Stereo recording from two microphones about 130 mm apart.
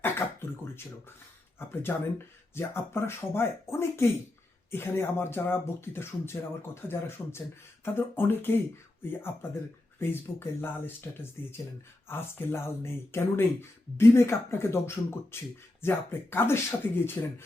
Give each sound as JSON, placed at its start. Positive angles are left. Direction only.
{"t": 1.5, "sound": "speech", "side_deg": 15}